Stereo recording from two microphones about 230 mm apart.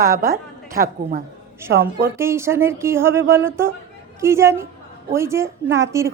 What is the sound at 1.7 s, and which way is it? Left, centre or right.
Speech, right.